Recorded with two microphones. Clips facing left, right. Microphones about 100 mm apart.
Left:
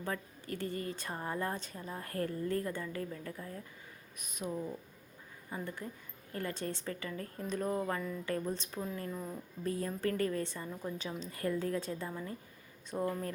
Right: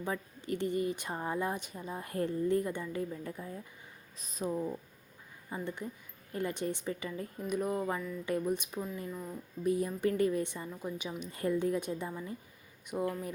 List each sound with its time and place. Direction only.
0.0 s speech: 20° right (ahead or behind)
4.2 s speech: 30° right (ahead or behind); by 8.9 s 15° right (ahead or behind)
9.0 s speech: centre (ahead or behind)
9.6 s speech: 15° right (ahead or behind)